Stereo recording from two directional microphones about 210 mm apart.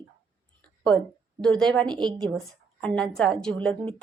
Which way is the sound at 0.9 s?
10° left (ahead or behind).